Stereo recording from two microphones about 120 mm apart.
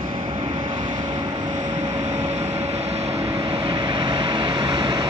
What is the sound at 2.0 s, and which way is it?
Vehicle, 75° right (ahead or behind).